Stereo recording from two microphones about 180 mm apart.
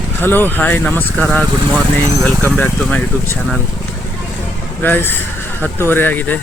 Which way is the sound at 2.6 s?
10° left (ahead or behind).